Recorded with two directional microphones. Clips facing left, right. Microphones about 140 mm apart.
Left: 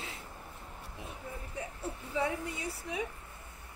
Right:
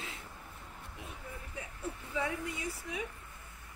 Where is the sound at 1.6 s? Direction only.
30° left (ahead or behind).